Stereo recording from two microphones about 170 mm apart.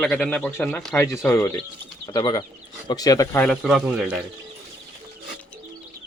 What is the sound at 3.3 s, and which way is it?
Speech, 5° left (ahead or behind).